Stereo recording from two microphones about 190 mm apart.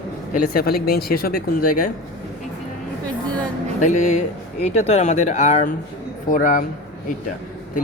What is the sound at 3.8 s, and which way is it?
Speech, 40° left (ahead or behind).